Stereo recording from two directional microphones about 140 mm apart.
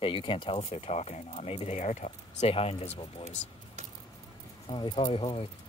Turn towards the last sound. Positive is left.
turn(degrees=40)  # may be behind; listen again after turning